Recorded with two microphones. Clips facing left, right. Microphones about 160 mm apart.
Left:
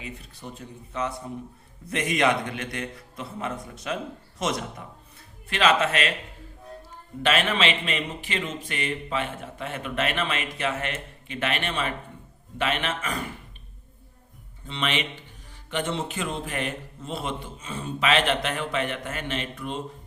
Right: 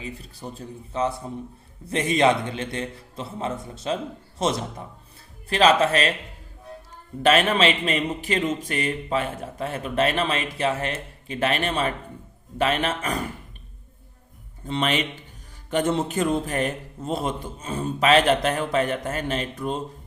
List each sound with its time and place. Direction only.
0.0 s a man's voice: 35° right (ahead or behind)
7.2 s speech: 40° right (ahead or behind)
14.7 s speech: 40° right (ahead or behind)